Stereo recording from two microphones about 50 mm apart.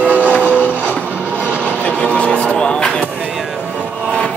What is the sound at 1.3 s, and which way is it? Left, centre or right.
Vehicle, right.